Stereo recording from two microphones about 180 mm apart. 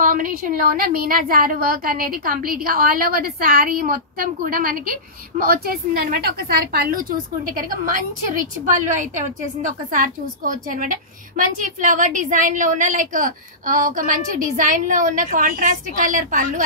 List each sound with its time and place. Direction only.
0.0 s a woman's voice: 50° right (ahead or behind)